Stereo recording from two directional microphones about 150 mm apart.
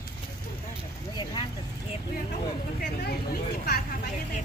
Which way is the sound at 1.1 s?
30° left (ahead or behind).